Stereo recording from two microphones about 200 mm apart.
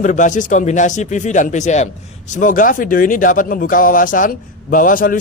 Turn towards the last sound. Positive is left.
turn(degrees=45)  # may be behind; listen again after turning